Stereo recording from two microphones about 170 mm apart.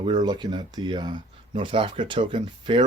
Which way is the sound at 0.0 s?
25° right (ahead or behind).